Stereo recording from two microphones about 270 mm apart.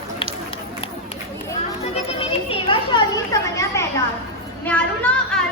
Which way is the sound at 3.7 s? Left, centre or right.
Centre.